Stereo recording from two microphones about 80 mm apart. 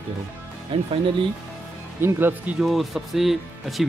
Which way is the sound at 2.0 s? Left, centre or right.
Right.